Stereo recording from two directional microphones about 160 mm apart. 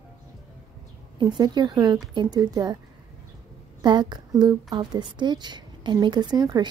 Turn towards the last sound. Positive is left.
turn(degrees=-25)  # may be behind; listen again after turning